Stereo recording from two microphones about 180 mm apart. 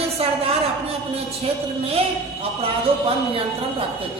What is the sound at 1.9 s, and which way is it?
A woman's voice, 35° right (ahead or behind).